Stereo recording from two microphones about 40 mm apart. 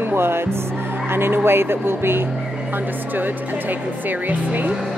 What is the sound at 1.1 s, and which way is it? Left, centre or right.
Speech, right.